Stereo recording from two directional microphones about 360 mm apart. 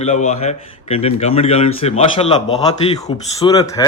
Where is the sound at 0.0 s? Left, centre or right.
Centre.